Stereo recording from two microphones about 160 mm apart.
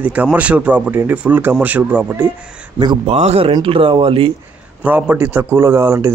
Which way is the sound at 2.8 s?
30° right (ahead or behind).